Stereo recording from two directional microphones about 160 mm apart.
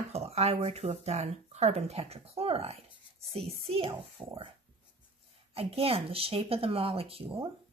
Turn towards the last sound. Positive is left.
turn(degrees=-35)  # may be behind; listen again after turning